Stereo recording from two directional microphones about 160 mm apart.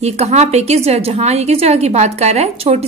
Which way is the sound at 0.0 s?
45° right (ahead or behind).